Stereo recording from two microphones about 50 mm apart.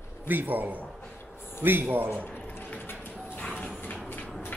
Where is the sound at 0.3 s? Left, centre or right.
Right.